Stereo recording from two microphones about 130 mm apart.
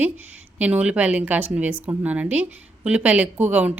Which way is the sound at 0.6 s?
10° right (ahead or behind).